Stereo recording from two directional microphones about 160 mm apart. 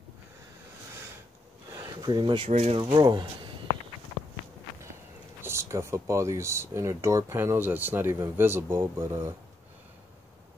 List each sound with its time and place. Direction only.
1.7 s a sound: 25° right (ahead or behind)
2.5 s speech: 40° right (ahead or behind)
5.4 s speech: 15° right (ahead or behind)